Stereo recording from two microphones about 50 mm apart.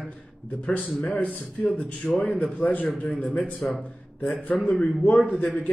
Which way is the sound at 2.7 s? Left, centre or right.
Left.